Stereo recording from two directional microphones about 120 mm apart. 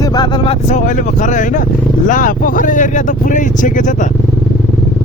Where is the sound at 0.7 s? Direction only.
90° left.